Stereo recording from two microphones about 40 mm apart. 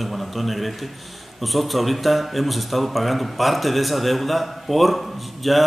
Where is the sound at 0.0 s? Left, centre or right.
Centre.